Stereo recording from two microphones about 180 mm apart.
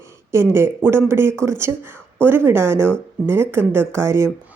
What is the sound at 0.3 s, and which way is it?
A woman's voice, 15° right (ahead or behind).